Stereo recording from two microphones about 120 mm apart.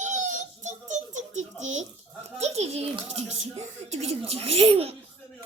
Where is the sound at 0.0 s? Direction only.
90° right; by 2.8 s 60° right (ahead or behind).